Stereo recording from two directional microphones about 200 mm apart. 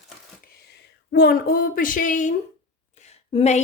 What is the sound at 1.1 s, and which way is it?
A woman's voice, 50° left (ahead or behind).